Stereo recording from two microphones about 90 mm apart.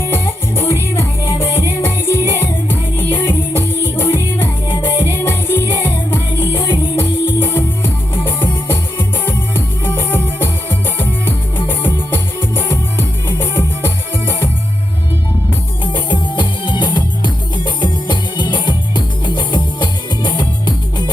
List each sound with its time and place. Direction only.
0.0 s music: 25° left (ahead or behind)
15.8 s music: 65° left (ahead or behind)